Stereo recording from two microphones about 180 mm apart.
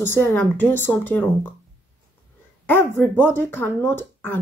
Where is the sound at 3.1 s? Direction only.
10° left (ahead or behind).